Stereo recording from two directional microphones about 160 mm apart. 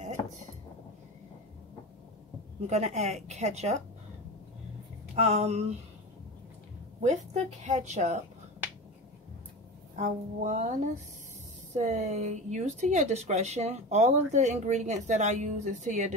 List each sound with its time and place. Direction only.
2.6 s speech: 45° right (ahead or behind)
5.1 s a sound: 40° right (ahead or behind)
7.0 s speech: 45° right (ahead or behind)
9.9 s speech: 45° right (ahead or behind)
11.7 s speech: 45° right (ahead or behind)